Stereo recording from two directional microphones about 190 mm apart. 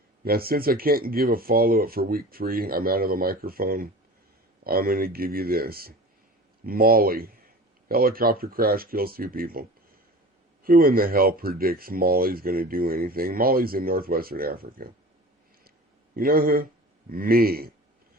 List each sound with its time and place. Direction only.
0.3 s speech: 50° right (ahead or behind)
16.1 s speech: 50° right (ahead or behind)